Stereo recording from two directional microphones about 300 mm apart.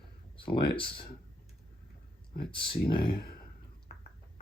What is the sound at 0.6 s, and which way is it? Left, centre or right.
Speech, centre.